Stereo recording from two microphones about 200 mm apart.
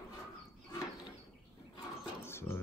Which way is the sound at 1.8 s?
10° left (ahead or behind).